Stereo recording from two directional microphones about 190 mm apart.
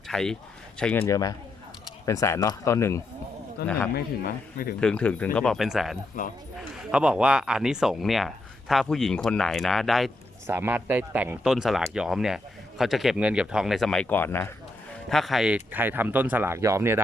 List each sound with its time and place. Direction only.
0.1 s speech: 5° left (ahead or behind)
1.0 s speech: 20° left (ahead or behind)
3.6 s speech: 55° left (ahead or behind)
4.8 s speech: 5° left (ahead or behind)
10.4 s speech: 10° right (ahead or behind); by 14.5 s 10° left (ahead or behind)
15.1 s speech: centre (ahead or behind)